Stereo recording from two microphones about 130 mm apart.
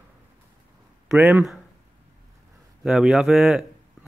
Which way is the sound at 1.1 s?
10° right (ahead or behind).